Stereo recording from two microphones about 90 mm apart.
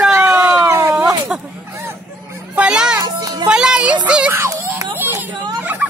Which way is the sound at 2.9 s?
45° right (ahead or behind).